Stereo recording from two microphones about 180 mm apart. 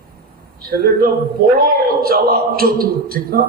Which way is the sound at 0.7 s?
55° right (ahead or behind).